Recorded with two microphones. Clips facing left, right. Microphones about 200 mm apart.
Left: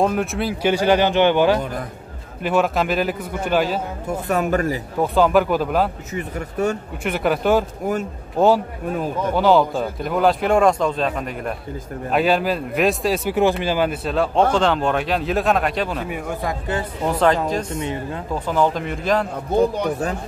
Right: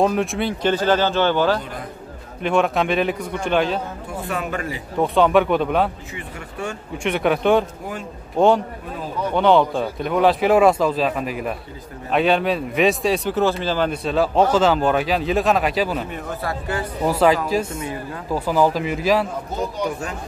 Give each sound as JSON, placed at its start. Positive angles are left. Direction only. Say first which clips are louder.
{"t": 0.0, "sound": "speech", "louder": "right 1 dB", "side_deg": 0}
{"t": 2.4, "sound": "speech", "louder": "even", "side_deg": 5}
{"t": 4.3, "sound": "speech", "louder": "left 7 dB", "side_deg": 40}
{"t": 5.0, "sound": "speech", "louder": "even", "side_deg": 0}
{"t": 6.1, "sound": "speech", "louder": "left 7 dB", "side_deg": 40}
{"t": 7.0, "sound": "speech", "louder": "right 3 dB", "side_deg": 0}
{"t": 9.3, "sound": "speech", "louder": "even", "side_deg": 5}
{"t": 13.3, "sound": "speech", "louder": "left 2 dB", "side_deg": 15}
{"t": 16.1, "sound": "speech", "louder": "left 2 dB", "side_deg": 10}
{"t": 17.0, "sound": "speech", "louder": "right 1 dB", "side_deg": -5}
{"t": 17.7, "sound": "speech", "louder": "left 3 dB", "side_deg": 25}
{"t": 18.3, "sound": "speech", "louder": "right 2 dB", "side_deg": -5}
{"t": 19.5, "sound": "speech", "louder": "left 9 dB", "side_deg": 35}